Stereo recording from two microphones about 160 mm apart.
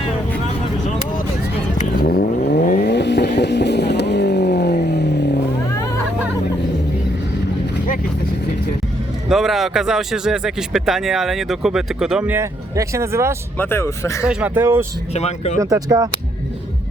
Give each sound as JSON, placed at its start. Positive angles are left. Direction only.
{"t": 2.0, "sound": "vehicle", "side_deg": 75}
{"t": 2.6, "sound": "vehicle", "side_deg": 50}
{"t": 2.8, "sound": "vehicle", "side_deg": 90}
{"t": 9.3, "sound": "speech", "side_deg": 0}
{"t": 13.6, "sound": "speech", "side_deg": 15}
{"t": 14.3, "sound": "speech", "side_deg": -5}
{"t": 15.1, "sound": "speech", "side_deg": 45}
{"t": 15.6, "sound": "speech", "side_deg": -25}